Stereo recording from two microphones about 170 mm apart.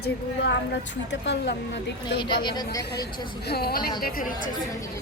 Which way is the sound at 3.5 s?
65° left (ahead or behind).